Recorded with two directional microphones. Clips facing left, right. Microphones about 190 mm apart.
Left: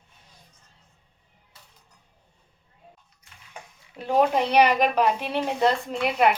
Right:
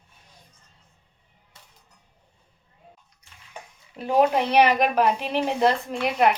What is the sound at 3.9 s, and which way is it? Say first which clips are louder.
Speech: right 1 dB; 10° right (ahead or behind).